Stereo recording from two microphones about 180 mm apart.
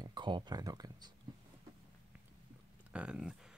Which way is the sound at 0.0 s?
25° right (ahead or behind).